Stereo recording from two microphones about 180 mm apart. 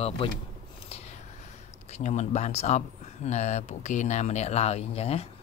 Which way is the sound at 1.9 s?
40° left (ahead or behind).